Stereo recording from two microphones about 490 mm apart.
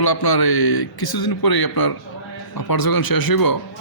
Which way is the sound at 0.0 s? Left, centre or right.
Left.